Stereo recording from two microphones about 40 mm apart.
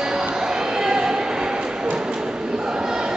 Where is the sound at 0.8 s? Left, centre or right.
Centre.